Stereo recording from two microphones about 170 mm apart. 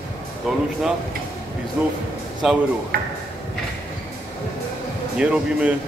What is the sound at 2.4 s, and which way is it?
Speech, 5° right (ahead or behind).